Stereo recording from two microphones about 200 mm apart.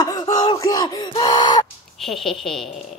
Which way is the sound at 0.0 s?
20° left (ahead or behind).